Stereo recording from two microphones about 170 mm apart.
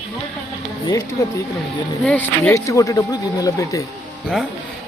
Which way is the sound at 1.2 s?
20° left (ahead or behind).